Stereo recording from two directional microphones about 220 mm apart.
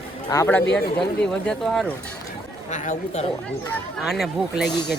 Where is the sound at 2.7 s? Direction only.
35° left (ahead or behind).